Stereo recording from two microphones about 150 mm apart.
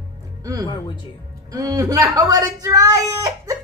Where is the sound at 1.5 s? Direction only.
25° right (ahead or behind).